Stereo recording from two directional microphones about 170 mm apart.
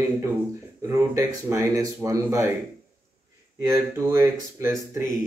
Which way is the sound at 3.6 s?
15° right (ahead or behind).